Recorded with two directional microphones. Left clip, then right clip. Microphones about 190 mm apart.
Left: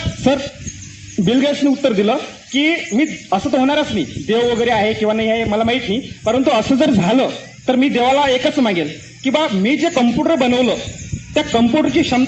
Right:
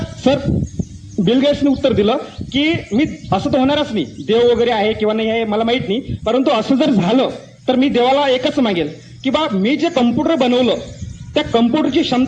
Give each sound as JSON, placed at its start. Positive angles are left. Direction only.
{"t": 0.2, "sound": "speech", "side_deg": 40}